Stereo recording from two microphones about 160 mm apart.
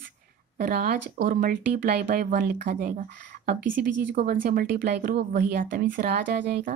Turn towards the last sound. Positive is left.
turn(degrees=-80)